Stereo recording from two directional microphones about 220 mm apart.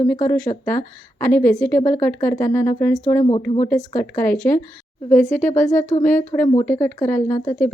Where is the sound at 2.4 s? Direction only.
10° left (ahead or behind).